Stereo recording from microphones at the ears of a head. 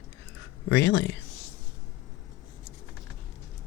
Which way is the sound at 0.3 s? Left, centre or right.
Left.